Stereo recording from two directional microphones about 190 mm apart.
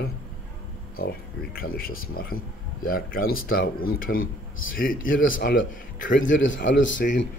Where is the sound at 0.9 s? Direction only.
50° left (ahead or behind).